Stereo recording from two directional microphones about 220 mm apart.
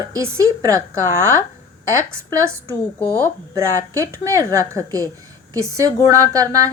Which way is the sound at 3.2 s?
15° right (ahead or behind).